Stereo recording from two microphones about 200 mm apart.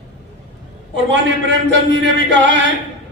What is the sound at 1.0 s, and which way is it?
A man's voice, 65° right (ahead or behind).